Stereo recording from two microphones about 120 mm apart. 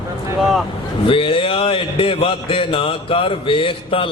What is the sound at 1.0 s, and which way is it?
Speech, 45° left (ahead or behind).